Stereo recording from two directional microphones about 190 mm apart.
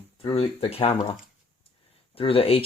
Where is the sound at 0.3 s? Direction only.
30° left (ahead or behind).